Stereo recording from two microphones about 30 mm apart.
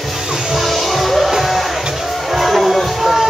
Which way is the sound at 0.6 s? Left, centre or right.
Centre.